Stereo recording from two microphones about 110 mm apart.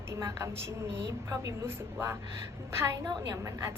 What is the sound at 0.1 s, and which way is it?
A woman's voice, 25° right (ahead or behind).